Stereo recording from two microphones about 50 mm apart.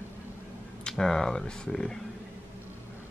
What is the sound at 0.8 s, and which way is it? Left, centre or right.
Speech, centre.